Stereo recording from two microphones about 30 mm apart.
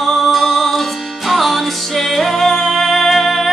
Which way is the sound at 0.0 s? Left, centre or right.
Centre.